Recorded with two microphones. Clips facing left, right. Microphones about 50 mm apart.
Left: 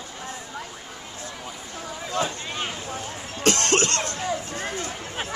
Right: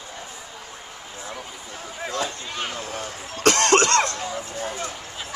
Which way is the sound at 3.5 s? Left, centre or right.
Right.